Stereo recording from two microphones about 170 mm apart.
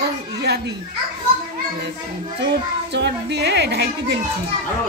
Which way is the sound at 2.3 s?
90° right.